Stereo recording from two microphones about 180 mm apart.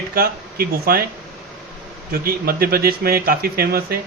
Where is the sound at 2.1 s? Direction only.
55° right (ahead or behind).